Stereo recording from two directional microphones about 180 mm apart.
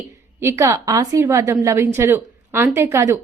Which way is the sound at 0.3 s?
15° right (ahead or behind).